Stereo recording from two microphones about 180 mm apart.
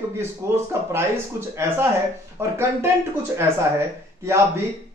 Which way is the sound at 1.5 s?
15° right (ahead or behind).